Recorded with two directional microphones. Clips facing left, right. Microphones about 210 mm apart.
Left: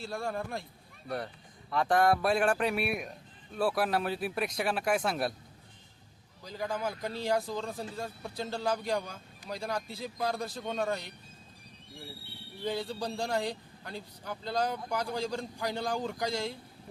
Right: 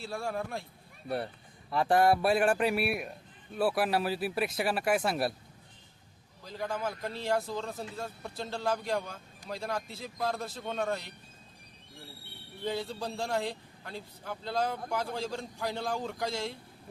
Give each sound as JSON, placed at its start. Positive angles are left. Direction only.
{"t": 0.0, "sound": "a man's voice", "side_deg": -5}
{"t": 1.0, "sound": "speech", "side_deg": -25}
{"t": 2.0, "sound": "a man's voice", "side_deg": -5}
{"t": 6.4, "sound": "a man's voice", "side_deg": 0}
{"t": 12.6, "sound": "a man's voice", "side_deg": 0}